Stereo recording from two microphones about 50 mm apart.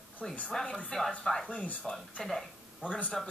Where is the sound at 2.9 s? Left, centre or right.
Left.